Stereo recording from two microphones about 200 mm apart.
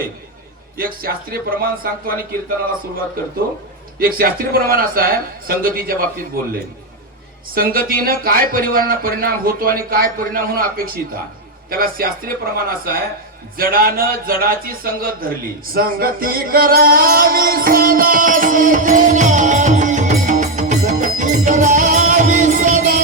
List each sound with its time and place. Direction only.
0.8 s speech: 45° right (ahead or behind)
3.9 s speech: 45° right (ahead or behind)
7.5 s speech: 45° right (ahead or behind)
13.6 s a sound: 45° right (ahead or behind)